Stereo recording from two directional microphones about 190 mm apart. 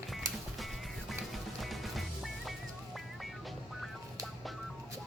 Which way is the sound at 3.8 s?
Centre (ahead or behind).